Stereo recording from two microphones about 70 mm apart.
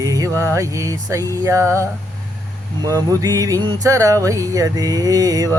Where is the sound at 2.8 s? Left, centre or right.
Right.